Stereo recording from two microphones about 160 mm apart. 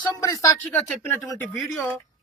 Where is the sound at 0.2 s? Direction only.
20° left (ahead or behind).